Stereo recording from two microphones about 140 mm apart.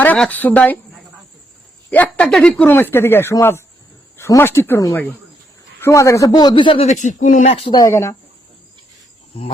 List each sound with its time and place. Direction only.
0.2 s speech: 10° left (ahead or behind)
1.9 s a man's voice: 10° left (ahead or behind); by 6.8 s 35° left (ahead or behind)
6.8 s speech: 60° left (ahead or behind); by 7.8 s 45° left (ahead or behind)
7.8 s a man's voice: 20° left (ahead or behind)
9.3 s speech: 45° left (ahead or behind)